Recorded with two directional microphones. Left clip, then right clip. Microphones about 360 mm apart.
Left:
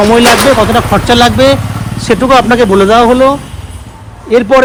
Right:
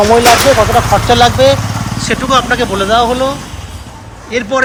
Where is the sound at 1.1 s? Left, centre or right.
Centre.